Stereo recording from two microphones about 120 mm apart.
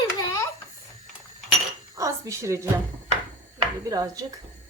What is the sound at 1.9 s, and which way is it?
Speech, 25° right (ahead or behind).